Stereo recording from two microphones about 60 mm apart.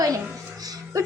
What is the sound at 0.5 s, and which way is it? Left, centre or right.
Music, right.